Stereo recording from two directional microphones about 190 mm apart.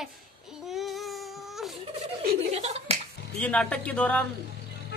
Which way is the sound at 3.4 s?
5° left (ahead or behind).